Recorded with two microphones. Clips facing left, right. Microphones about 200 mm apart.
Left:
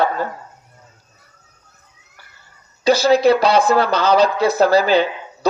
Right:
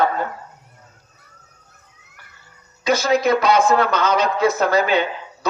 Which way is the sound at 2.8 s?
35° left (ahead or behind).